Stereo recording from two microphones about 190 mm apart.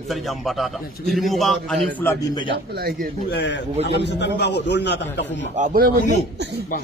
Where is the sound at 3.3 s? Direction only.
65° left (ahead or behind).